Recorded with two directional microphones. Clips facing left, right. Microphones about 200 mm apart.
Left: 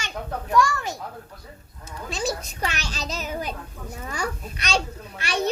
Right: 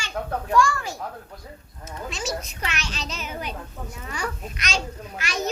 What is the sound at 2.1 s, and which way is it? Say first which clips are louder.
A child's voice: left 3 dB; 35° left (ahead or behind).